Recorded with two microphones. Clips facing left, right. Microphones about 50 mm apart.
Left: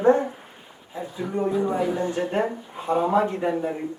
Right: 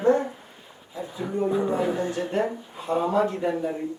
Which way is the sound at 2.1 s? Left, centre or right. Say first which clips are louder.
Left 1 dB; left.